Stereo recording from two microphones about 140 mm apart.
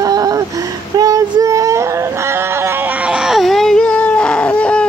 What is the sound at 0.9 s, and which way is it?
Child singing, 25° right (ahead or behind).